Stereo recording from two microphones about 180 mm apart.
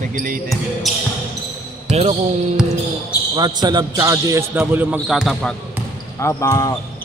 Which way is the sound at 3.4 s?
25° right (ahead or behind).